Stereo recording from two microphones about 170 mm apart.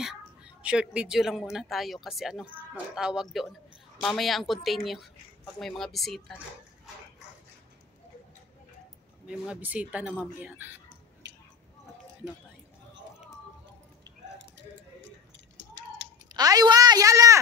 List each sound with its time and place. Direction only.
0.0 s a woman's voice: 5° right (ahead or behind)
9.3 s speech: 10° right (ahead or behind)
16.3 s speech: 20° right (ahead or behind)